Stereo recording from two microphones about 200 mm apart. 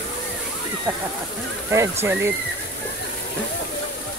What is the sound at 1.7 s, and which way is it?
Speech, 10° right (ahead or behind).